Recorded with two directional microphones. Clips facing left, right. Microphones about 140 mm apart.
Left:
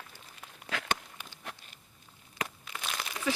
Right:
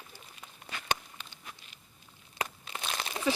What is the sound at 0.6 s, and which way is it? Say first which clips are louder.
Walk: left 7 dB; 5° left (ahead or behind).